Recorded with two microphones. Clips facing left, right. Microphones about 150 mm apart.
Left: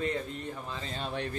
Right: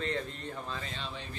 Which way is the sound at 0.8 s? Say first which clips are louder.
Left 4 dB; 45° left (ahead or behind).